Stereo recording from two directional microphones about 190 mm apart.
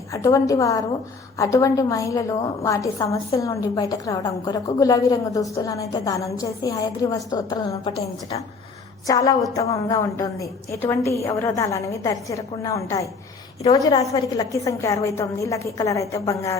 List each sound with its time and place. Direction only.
0.1 s a woman's voice: 15° left (ahead or behind)
7.9 s a woman's voice: 30° left (ahead or behind)
9.0 s a woman's voice: 20° left (ahead or behind)